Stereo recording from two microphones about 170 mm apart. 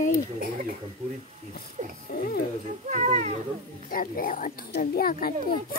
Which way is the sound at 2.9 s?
45° right (ahead or behind).